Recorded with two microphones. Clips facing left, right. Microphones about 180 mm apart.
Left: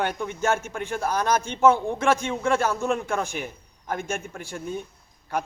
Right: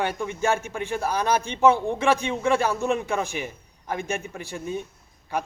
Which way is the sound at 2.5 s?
15° right (ahead or behind).